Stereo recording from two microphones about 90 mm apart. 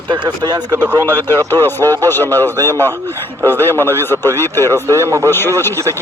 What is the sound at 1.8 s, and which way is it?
Speech, 40° right (ahead or behind).